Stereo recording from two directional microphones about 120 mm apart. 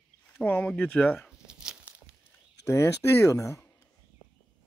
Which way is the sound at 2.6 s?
25° left (ahead or behind).